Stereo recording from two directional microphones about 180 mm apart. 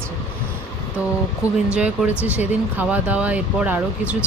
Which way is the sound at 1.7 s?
5° right (ahead or behind).